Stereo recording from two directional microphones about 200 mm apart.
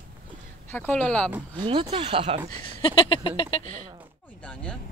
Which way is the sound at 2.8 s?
25° left (ahead or behind).